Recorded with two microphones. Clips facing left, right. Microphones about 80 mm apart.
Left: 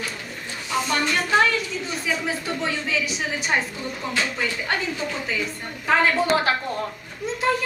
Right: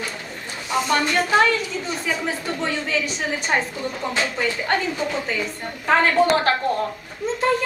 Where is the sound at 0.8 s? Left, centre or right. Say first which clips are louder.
Right 4 dB; centre.